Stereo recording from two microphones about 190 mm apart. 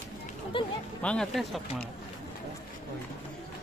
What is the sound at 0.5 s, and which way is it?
Music, 25° left (ahead or behind).